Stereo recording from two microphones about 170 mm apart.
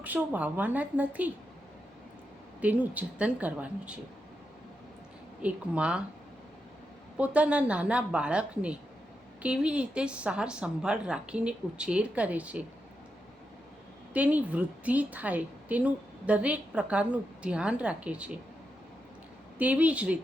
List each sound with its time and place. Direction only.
0.0 s a woman's voice: 10° right (ahead or behind)
2.6 s a woman's voice: 10° right (ahead or behind)
5.4 s a woman's voice: 10° right (ahead or behind)
7.2 s a woman's voice: 5° right (ahead or behind)
14.1 s a woman's voice: 10° right (ahead or behind)
19.5 s a woman's voice: 10° right (ahead or behind)